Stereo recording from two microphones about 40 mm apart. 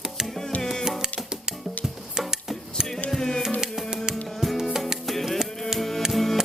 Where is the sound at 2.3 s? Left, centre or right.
Centre.